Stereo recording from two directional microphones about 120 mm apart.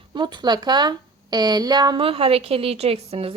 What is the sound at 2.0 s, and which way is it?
A woman's voice, 50° right (ahead or behind).